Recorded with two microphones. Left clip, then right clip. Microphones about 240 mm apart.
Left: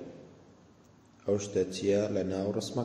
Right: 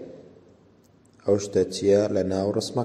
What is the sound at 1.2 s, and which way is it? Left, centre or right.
A man's voice, right.